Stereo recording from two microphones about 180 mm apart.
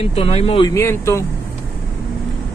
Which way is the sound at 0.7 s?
15° left (ahead or behind).